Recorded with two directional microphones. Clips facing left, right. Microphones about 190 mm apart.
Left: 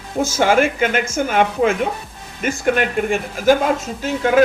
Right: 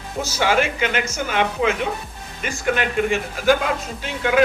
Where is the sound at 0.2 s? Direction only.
50° left (ahead or behind).